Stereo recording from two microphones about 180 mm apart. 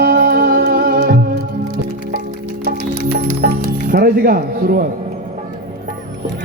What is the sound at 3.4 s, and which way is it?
Music, 55° right (ahead or behind).